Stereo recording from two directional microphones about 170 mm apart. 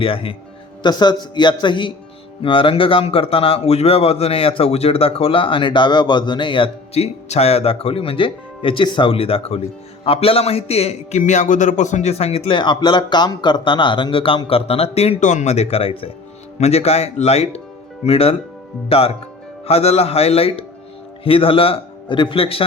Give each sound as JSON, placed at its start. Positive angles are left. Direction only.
{"t": 0.0, "sound": "a man's voice", "side_deg": 30}